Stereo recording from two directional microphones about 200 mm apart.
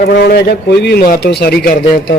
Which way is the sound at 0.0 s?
50° left (ahead or behind).